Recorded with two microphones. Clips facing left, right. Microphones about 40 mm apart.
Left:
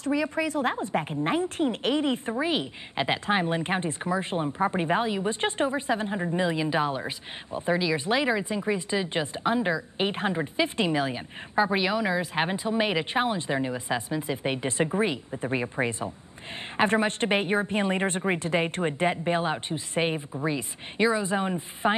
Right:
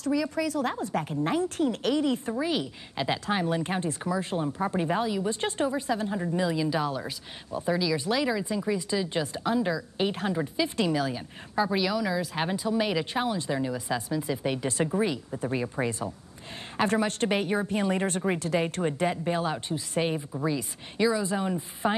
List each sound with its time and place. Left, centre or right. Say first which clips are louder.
0.0 s a woman's voice: left 1 dB; left